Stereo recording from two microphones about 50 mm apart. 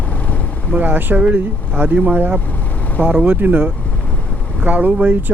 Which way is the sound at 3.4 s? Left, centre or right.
Right.